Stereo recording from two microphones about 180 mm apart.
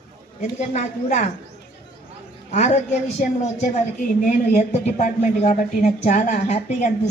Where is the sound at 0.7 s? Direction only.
40° left (ahead or behind).